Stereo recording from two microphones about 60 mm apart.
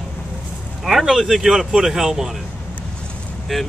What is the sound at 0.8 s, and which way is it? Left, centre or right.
Speech, centre.